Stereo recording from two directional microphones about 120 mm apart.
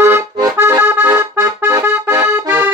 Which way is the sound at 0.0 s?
25° right (ahead or behind).